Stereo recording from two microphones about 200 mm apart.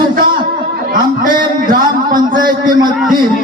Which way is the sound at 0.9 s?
45° right (ahead or behind).